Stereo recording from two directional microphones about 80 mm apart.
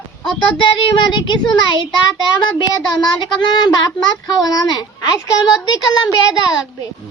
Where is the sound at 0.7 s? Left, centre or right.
Left.